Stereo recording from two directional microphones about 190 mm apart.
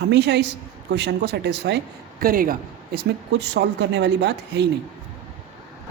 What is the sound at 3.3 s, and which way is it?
A woman's voice, 65° right (ahead or behind).